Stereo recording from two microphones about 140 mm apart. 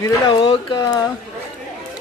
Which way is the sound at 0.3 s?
35° left (ahead or behind).